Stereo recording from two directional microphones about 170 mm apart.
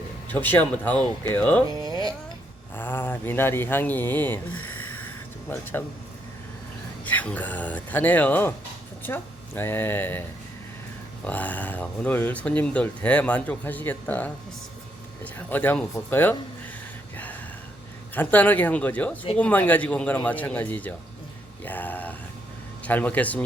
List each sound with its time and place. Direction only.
0.3 s speech: 10° left (ahead or behind)
1.8 s speech: 20° right (ahead or behind)
2.7 s speech: 10° left (ahead or behind)
5.5 s speech: 10° left (ahead or behind)
7.0 s speech: 10° left (ahead or behind)
11.3 s speech: 10° left (ahead or behind)
18.1 s speech: 10° left (ahead or behind)